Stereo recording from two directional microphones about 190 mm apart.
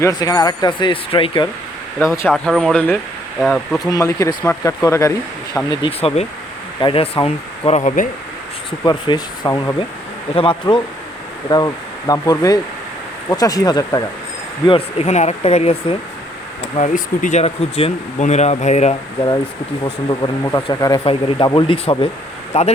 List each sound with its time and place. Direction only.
0.0 s speech: 20° left (ahead or behind)
2.2 s speech: centre (ahead or behind)
3.8 s speech: 15° left (ahead or behind)
5.8 s speech: 30° left (ahead or behind)
8.8 s speech: 20° left (ahead or behind)
14.7 s speech: 35° left (ahead or behind)
19.8 s speech: 25° left (ahead or behind)